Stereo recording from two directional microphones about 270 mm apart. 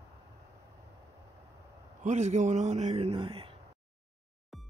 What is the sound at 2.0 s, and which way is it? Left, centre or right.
A man's voice, right.